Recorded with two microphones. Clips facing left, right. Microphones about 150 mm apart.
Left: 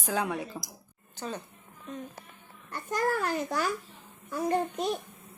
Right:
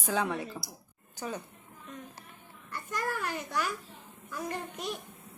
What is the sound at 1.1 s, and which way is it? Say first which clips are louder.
Speech: even; 10° right (ahead or behind).